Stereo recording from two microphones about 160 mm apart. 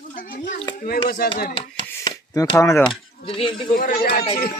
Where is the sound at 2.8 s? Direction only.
30° left (ahead or behind).